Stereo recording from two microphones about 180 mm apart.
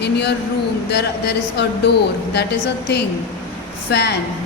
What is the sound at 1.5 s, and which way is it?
Speech, 70° left (ahead or behind).